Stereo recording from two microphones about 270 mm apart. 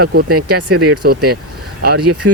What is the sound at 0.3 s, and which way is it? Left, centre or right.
Speech, right.